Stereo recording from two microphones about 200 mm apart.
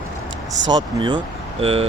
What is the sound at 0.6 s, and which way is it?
Speech, 25° right (ahead or behind).